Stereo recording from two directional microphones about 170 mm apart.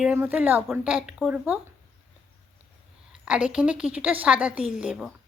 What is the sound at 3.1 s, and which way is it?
A woman's voice, 5° right (ahead or behind).